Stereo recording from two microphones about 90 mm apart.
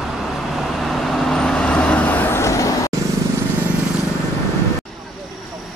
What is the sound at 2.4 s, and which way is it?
Vehicle, 35° left (ahead or behind).